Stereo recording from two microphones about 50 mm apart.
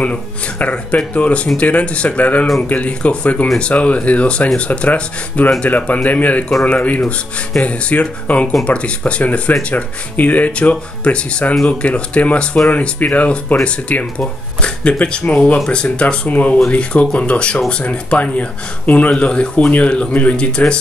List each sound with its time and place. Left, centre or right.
0.0 s speech: left